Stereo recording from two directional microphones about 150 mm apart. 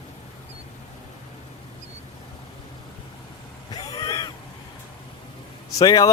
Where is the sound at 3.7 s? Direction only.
25° left (ahead or behind).